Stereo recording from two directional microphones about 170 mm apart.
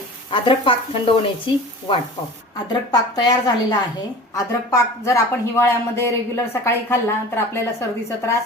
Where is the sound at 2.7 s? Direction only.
25° left (ahead or behind).